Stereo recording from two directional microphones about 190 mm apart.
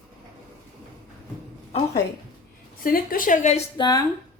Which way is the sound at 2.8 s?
50° left (ahead or behind).